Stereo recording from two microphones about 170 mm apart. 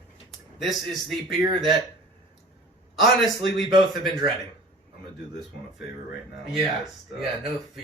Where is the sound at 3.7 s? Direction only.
25° right (ahead or behind).